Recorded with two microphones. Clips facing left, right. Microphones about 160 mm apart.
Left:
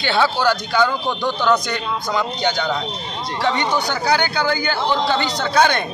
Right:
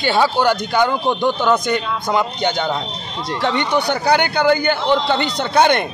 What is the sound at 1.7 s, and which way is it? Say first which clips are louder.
A man's voice: right 3 dB; 55° right (ahead or behind).